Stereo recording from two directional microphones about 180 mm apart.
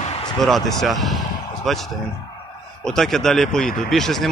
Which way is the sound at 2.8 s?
5° left (ahead or behind).